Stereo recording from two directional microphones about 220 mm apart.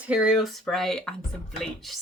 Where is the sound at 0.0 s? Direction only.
5° right (ahead or behind).